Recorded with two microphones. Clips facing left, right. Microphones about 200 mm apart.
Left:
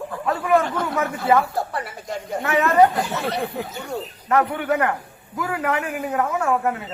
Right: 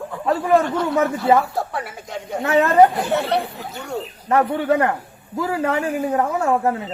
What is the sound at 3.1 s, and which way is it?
Speech, 60° right (ahead or behind).